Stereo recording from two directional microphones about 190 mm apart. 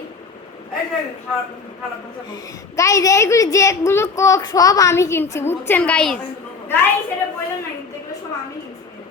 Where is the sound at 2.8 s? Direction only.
15° left (ahead or behind).